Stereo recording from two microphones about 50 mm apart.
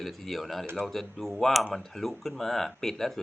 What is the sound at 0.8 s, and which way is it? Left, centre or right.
Speech, centre.